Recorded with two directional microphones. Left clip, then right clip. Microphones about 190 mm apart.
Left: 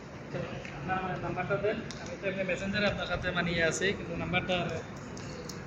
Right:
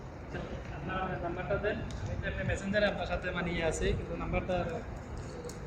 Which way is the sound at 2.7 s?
65° right (ahead or behind).